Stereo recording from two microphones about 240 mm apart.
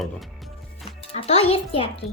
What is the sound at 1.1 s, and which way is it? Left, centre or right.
Speech, left.